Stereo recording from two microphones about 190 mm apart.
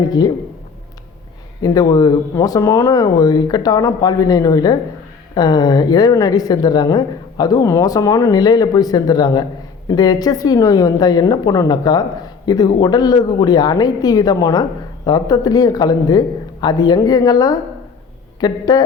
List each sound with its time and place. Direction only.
1.6 s a woman's voice: 20° left (ahead or behind)